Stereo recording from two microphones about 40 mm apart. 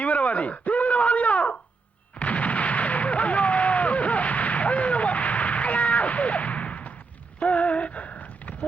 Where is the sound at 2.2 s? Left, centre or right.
Left.